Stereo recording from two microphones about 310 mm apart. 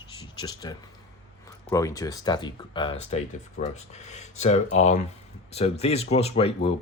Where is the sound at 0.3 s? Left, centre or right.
Centre.